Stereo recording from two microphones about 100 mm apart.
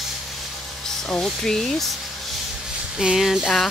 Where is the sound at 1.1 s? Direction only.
5° left (ahead or behind).